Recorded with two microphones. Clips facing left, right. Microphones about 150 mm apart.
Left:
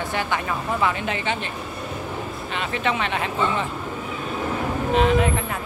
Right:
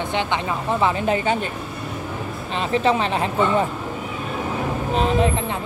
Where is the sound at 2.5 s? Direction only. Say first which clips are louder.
Right 6 dB; 35° right (ahead or behind).